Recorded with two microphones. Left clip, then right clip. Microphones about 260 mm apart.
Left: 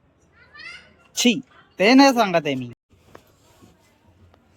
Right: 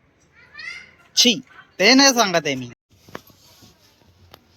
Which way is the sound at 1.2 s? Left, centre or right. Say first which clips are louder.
Right 4 dB; centre.